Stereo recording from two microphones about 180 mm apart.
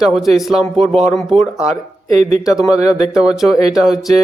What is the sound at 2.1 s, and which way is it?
Speech, 40° right (ahead or behind).